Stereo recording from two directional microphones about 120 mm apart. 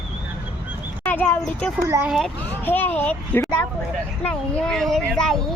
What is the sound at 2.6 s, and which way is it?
Speech, 15° left (ahead or behind).